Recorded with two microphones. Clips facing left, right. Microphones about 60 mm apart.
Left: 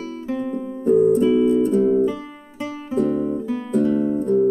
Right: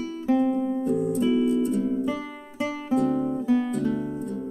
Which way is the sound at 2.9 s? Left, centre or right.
Left.